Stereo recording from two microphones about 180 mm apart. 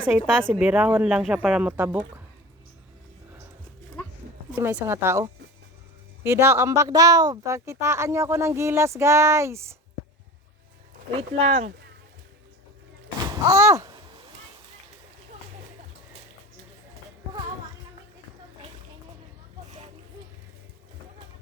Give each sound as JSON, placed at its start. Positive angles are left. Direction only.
{"t": 0.5, "sound": "speech", "side_deg": -5}
{"t": 4.5, "sound": "speech", "side_deg": -10}
{"t": 11.2, "sound": "speech", "side_deg": -35}
{"t": 13.1, "sound": "speech", "side_deg": -20}